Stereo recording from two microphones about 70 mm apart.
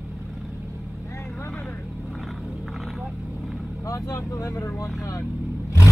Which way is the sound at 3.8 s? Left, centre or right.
Left.